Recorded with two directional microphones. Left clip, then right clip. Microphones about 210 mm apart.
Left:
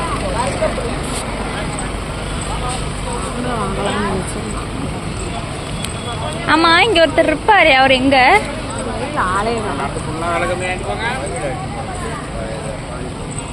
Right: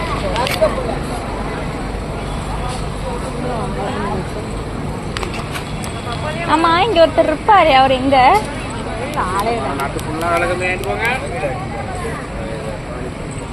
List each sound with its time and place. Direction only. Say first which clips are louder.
6.5 s a woman's voice: left 2 dB; 20° left (ahead or behind)
10.3 s speech: right 2 dB; 45° right (ahead or behind)